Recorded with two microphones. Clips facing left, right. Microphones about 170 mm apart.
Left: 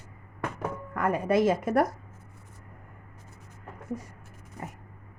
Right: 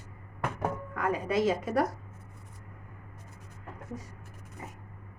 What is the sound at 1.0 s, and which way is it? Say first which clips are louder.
Speech: left 4 dB; 55° left (ahead or behind).